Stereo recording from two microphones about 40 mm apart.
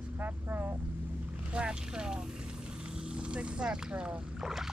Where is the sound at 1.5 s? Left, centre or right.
Right.